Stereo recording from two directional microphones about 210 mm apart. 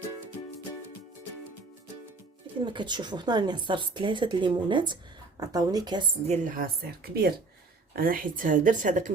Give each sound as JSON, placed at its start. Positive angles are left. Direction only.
{"t": 2.6, "sound": "speech", "side_deg": -20}
{"t": 6.2, "sound": "speech", "side_deg": -35}